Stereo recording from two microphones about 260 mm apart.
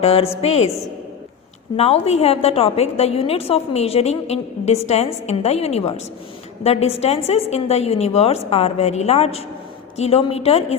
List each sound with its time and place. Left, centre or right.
0.0 s a woman's voice: left
1.7 s a woman's voice: left